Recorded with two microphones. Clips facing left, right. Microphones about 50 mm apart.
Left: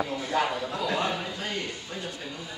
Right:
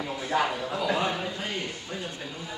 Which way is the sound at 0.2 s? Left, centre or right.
Centre.